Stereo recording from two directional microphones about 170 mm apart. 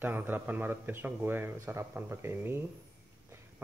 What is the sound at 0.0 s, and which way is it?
Speech, 10° right (ahead or behind).